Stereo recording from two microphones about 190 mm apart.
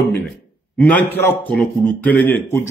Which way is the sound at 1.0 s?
10° left (ahead or behind).